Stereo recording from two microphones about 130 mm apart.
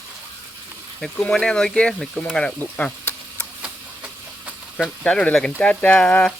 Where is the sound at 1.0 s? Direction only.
5° left (ahead or behind).